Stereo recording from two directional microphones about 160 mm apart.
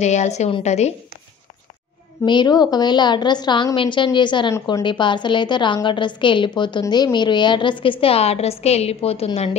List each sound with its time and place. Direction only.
0.0 s a woman's voice: 45° left (ahead or behind)
2.2 s a woman's voice: 25° left (ahead or behind)